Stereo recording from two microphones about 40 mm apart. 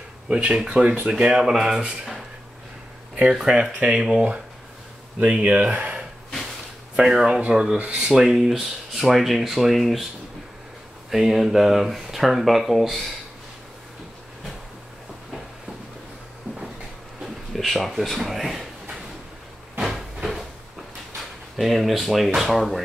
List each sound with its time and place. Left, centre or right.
0.3 s speech: right
1.4 s speech: centre
3.3 s speech: centre
5.2 s speech: right
7.0 s speech: centre
7.2 s speech: right
8.2 s speech: centre
11.1 s speech: centre
17.5 s speech: centre
19.8 s a sound: centre
21.5 s speech: centre